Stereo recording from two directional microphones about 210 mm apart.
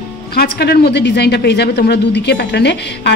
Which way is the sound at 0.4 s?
50° left (ahead or behind).